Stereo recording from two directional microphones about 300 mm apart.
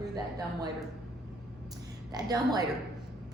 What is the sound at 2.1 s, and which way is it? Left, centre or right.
Speech, centre.